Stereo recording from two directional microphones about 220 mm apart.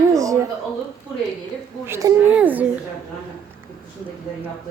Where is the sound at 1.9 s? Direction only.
10° right (ahead or behind).